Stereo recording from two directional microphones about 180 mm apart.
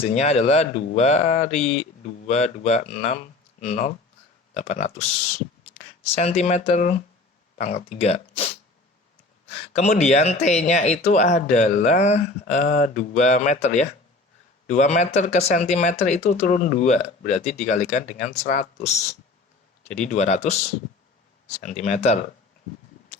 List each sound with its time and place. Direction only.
0.0 s speech: 35° left (ahead or behind)
9.7 s speech: 40° left (ahead or behind)
20.0 s speech: 40° left (ahead or behind)
21.6 s speech: 40° left (ahead or behind)